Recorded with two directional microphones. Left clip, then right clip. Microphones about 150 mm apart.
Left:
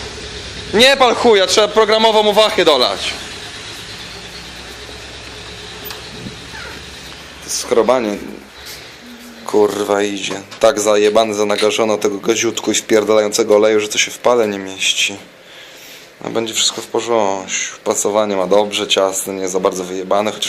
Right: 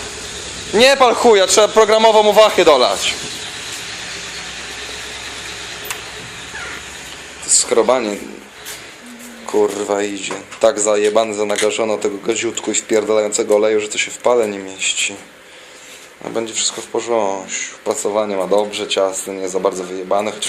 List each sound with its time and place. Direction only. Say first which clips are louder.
0.7 s a man's voice: even; centre (ahead or behind)
7.6 s a man's voice: left 2 dB; 5° left (ahead or behind)
9.5 s speech: left 3 dB; 5° left (ahead or behind)
16.2 s speech: left 4 dB; 5° left (ahead or behind)